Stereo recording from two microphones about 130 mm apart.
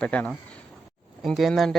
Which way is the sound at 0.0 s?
10° left (ahead or behind).